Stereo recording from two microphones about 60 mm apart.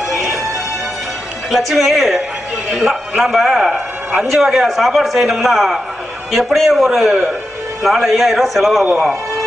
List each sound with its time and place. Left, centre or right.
0.1 s music: centre
1.5 s a man's voice: centre